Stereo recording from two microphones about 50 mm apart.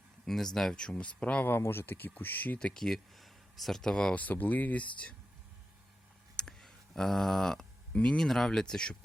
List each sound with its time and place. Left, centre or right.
0.3 s speech: centre
0.9 s speech: left
1.7 s speech: left
2.7 s speech: centre
4.1 s speech: left
6.3 s a sound: centre
7.9 s speech: centre
8.3 s speech: centre